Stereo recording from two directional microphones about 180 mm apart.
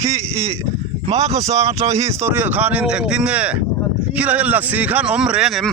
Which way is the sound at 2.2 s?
10° right (ahead or behind).